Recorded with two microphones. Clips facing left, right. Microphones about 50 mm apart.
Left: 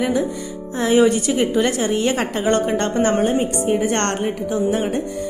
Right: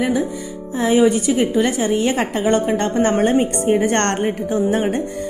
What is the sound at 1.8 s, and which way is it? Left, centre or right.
A woman's voice, centre.